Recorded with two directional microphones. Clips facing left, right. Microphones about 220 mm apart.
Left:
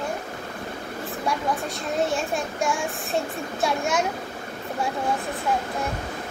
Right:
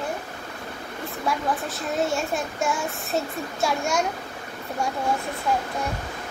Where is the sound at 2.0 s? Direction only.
Centre (ahead or behind).